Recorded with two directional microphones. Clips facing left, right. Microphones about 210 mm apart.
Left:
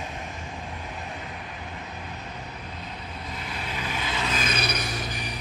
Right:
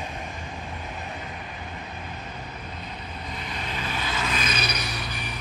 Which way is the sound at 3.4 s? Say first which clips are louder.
Right 1 dB; 5° left (ahead or behind).